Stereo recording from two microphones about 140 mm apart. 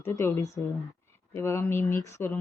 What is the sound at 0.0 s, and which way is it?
Speech, 20° left (ahead or behind).